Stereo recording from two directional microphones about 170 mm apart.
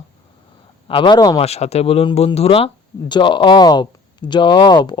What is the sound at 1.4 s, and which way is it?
Speech, 40° left (ahead or behind).